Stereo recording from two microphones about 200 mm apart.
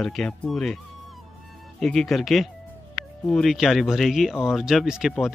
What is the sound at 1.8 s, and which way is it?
Speech, centre (ahead or behind).